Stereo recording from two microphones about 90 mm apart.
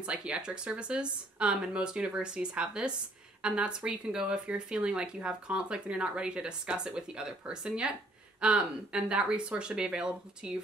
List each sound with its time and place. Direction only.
0.0 s speech: 10° right (ahead or behind)